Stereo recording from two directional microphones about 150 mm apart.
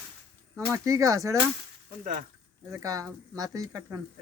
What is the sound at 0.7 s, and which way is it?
Speech, 20° right (ahead or behind).